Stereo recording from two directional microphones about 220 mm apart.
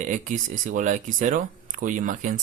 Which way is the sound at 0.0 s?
35° right (ahead or behind).